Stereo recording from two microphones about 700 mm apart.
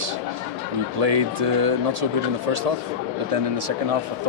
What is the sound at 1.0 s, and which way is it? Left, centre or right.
Speech, right.